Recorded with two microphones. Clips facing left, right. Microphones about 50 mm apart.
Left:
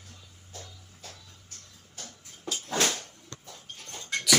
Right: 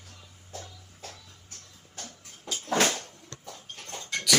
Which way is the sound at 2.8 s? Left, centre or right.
Right.